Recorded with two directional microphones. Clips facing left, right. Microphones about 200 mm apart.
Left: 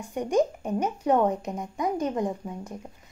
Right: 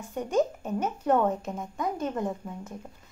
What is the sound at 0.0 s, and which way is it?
Speech, 15° left (ahead or behind).